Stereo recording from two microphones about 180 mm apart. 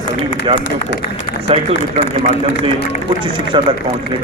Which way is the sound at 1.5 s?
30° right (ahead or behind).